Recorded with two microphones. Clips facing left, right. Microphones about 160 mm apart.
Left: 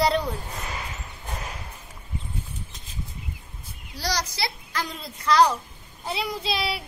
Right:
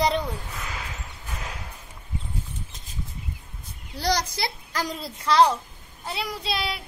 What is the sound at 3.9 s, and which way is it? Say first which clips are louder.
Speech: right 4 dB; 55° right (ahead or behind).